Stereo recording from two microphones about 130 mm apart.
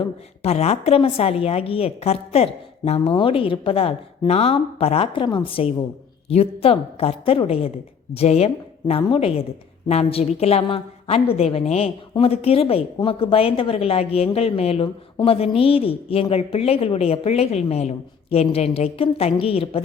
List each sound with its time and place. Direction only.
0.4 s a woman's voice: 55° left (ahead or behind)